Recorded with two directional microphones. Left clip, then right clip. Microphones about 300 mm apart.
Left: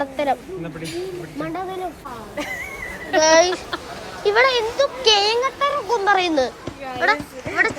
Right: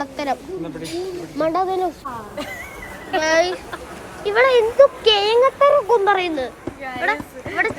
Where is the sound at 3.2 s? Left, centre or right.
Centre.